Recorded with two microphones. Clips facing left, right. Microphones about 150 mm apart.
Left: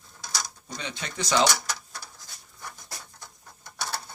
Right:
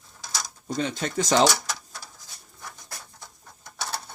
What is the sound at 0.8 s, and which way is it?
Speech, 45° right (ahead or behind).